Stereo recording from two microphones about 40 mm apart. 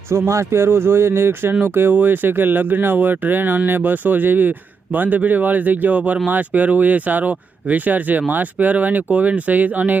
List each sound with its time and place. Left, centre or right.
0.6 s speech: right
1.9 s speech: right